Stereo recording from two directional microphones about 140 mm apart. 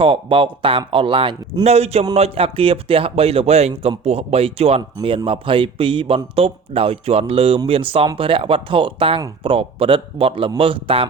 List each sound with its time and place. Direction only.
0.0 s speech: 40° right (ahead or behind)